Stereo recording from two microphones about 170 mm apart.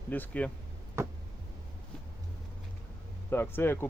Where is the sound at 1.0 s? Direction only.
15° right (ahead or behind).